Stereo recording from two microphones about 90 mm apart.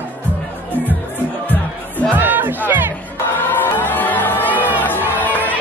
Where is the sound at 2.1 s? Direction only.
20° right (ahead or behind).